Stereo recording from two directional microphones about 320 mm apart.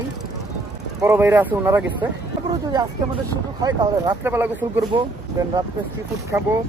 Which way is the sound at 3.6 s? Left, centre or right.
Centre.